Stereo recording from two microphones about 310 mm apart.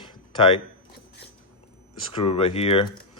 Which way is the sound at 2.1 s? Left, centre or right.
Centre.